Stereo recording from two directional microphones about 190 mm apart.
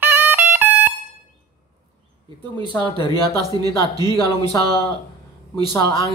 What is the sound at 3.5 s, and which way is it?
Speech, 20° right (ahead or behind).